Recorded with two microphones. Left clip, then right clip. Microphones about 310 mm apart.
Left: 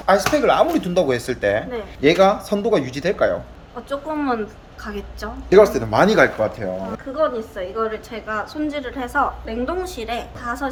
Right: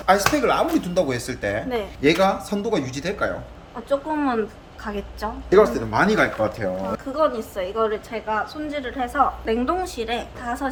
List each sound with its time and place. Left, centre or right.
0.0 s speech: centre
3.8 s speech: centre
5.5 s speech: left
6.4 s a woman's voice: centre
7.1 s a woman's voice: right
8.1 s a woman's voice: centre